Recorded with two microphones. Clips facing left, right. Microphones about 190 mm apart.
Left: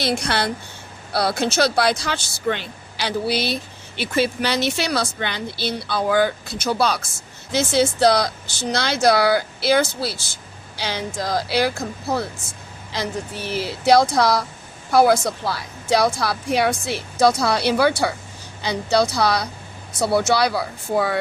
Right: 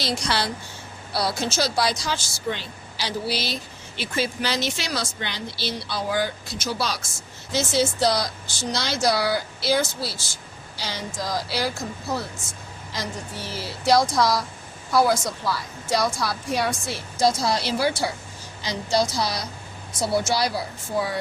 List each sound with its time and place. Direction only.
0.0 s speech: 55° left (ahead or behind)
13.8 s speech: 60° left (ahead or behind)